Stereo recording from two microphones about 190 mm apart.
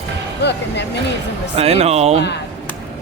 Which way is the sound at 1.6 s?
35° right (ahead or behind).